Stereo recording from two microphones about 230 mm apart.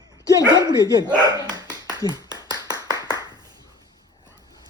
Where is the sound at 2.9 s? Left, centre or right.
Centre.